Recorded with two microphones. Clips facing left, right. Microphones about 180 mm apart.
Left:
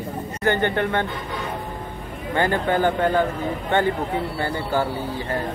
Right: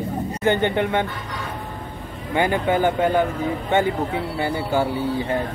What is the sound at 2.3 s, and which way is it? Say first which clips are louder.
Speech: right 1 dB; 10° right (ahead or behind).